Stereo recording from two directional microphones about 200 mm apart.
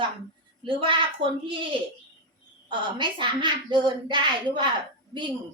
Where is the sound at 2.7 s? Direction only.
25° right (ahead or behind).